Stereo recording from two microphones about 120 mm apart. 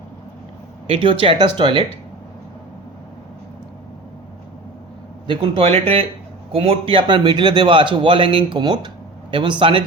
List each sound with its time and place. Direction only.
0.9 s a man's voice: 45° right (ahead or behind)
5.2 s a man's voice: 45° right (ahead or behind)